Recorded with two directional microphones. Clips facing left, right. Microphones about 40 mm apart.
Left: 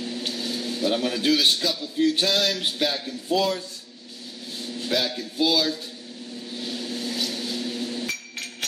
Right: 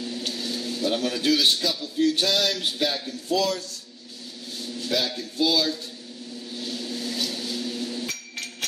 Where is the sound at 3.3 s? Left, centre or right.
Left.